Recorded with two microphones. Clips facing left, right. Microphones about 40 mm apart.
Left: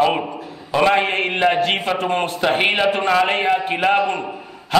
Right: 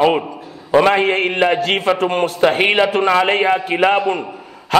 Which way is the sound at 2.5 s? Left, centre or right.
Right.